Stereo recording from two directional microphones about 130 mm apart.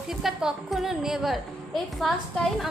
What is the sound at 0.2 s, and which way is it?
Music, 5° right (ahead or behind).